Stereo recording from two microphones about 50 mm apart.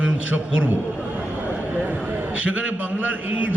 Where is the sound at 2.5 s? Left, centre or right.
Right.